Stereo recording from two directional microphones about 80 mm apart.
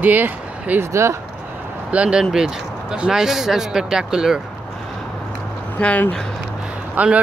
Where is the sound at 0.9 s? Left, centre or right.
Right.